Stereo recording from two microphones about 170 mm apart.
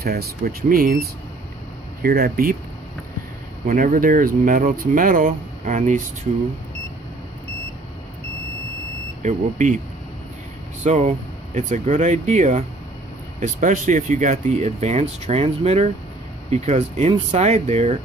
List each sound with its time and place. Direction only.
0.0 s speech: 65° right (ahead or behind)
2.0 s speech: 60° right (ahead or behind)
3.6 s speech: 55° right (ahead or behind)
9.2 s speech: 45° right (ahead or behind)
10.8 s speech: 45° right (ahead or behind)